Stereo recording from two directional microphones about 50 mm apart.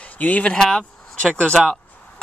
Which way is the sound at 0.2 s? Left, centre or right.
Left.